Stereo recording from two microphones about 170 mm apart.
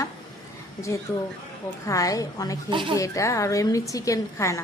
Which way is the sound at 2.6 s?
30° right (ahead or behind).